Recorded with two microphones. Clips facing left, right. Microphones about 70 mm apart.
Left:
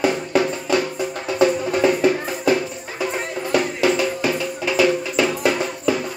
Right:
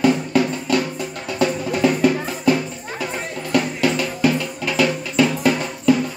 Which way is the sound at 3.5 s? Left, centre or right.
Centre.